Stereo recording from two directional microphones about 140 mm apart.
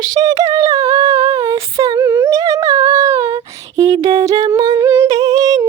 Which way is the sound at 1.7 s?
25° right (ahead or behind).